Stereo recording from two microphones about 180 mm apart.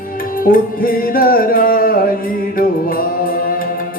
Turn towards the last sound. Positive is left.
turn(degrees=55)  # may be behind; listen again after turning